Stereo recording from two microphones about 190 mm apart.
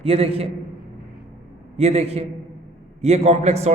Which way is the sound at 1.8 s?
35° right (ahead or behind).